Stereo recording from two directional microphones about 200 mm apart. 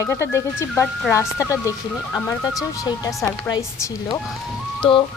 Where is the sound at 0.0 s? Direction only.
15° left (ahead or behind).